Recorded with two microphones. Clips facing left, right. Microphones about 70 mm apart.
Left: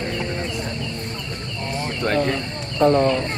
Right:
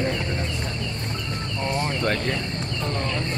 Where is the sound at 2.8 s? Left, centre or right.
Left.